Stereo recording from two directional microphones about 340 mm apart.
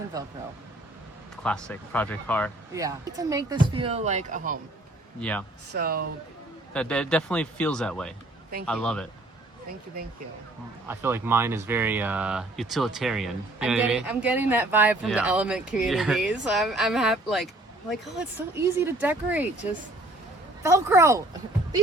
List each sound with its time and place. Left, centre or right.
1.5 s speech: centre
2.7 s speech: centre
5.7 s speech: right
6.7 s speech: centre
10.8 s speech: centre
20.6 s speech: centre